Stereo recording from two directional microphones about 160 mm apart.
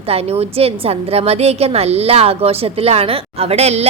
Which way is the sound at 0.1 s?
40° right (ahead or behind).